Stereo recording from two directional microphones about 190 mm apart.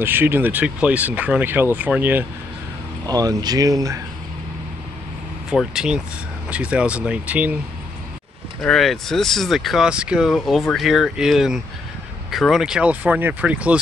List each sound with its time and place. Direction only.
0.0 s speech: 10° right (ahead or behind)
5.5 s speech: 5° right (ahead or behind)
8.6 s speech: centre (ahead or behind)